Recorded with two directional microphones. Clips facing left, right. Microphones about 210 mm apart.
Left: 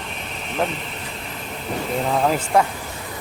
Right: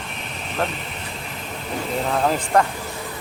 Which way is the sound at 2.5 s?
10° left (ahead or behind).